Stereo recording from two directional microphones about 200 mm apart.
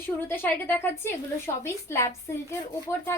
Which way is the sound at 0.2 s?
10° left (ahead or behind).